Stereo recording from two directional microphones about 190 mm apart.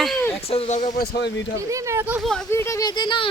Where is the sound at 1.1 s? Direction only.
65° left (ahead or behind).